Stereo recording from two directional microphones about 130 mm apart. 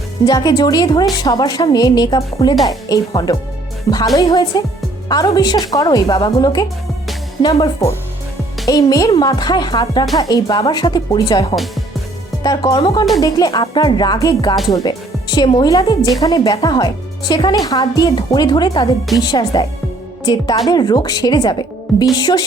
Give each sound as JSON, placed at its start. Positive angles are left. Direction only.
{"t": 0.3, "sound": "speech", "side_deg": 30}
{"t": 8.6, "sound": "a woman's voice", "side_deg": 25}
{"t": 20.7, "sound": "speech", "side_deg": 30}